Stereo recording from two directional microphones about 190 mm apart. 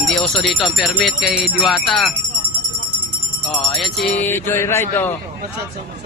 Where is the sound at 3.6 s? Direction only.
Centre (ahead or behind).